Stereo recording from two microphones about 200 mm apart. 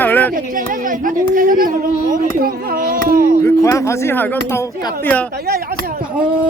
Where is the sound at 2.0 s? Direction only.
45° right (ahead or behind).